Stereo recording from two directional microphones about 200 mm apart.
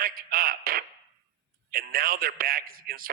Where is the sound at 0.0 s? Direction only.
45° right (ahead or behind).